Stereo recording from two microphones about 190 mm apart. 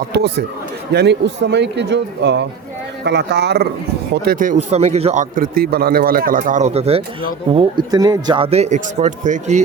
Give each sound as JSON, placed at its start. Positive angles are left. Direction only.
{"t": 0.9, "sound": "a man's voice", "side_deg": -65}